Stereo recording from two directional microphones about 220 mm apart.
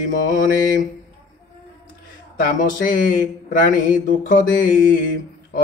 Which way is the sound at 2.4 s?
40° left (ahead or behind).